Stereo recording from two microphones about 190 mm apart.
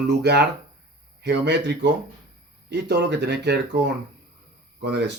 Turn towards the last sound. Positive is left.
turn(degrees=-60)  # may be behind; listen again after turning